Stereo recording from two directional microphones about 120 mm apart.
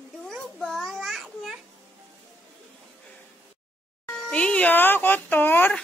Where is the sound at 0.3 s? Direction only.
Centre (ahead or behind).